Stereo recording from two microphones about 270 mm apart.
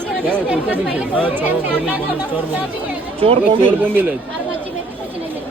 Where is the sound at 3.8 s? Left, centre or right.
Centre.